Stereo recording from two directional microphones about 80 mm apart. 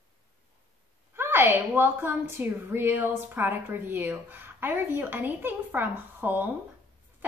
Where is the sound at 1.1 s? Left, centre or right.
Right.